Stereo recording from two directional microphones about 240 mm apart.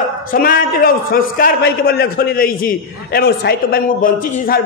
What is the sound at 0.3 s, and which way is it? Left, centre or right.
A man's voice, left.